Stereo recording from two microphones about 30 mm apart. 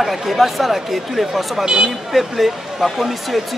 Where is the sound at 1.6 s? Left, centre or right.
Right.